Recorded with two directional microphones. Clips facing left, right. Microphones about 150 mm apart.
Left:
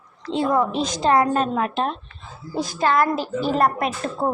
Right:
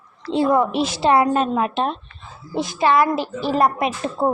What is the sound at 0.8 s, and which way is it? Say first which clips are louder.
Speech: right 2 dB; 5° right (ahead or behind).